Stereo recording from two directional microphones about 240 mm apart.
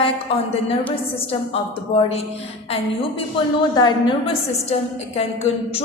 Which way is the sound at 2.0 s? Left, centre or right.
Left.